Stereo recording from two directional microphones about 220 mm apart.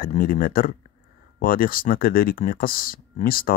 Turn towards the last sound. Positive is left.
turn(degrees=40)  # may be behind; listen again after turning